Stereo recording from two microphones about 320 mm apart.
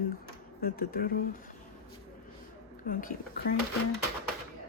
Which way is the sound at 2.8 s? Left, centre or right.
Left.